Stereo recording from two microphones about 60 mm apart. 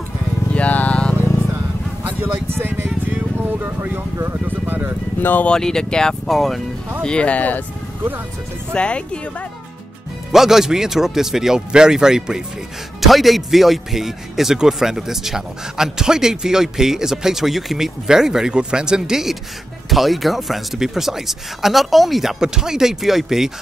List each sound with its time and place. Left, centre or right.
0.5 s music: left
2.0 s a sound: right
3.3 s speech: right
5.2 s speech: left
5.5 s speech: centre
7.0 s speech: centre
8.7 s speech: centre
10.3 s a man's voice: centre